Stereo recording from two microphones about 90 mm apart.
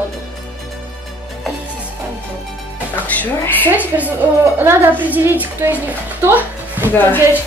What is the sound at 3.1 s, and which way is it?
Speech, 20° left (ahead or behind).